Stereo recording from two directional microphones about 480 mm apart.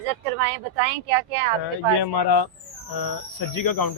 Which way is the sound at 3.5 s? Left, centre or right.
Left.